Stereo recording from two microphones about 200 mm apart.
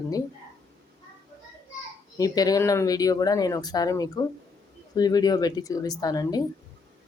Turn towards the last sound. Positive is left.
turn(degrees=20)  # may be behind; listen again after turning